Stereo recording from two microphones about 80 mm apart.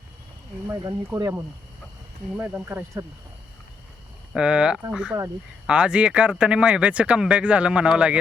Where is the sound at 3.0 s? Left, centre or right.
Right.